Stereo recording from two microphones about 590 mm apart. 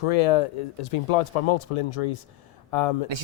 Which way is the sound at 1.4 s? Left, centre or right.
Left.